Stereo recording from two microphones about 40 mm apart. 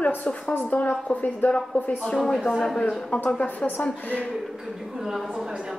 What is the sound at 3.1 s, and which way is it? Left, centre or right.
Speech, left.